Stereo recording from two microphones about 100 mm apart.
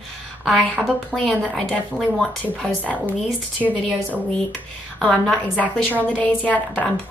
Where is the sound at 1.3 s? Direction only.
10° left (ahead or behind).